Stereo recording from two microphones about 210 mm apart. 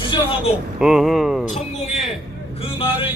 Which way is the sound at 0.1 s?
25° left (ahead or behind).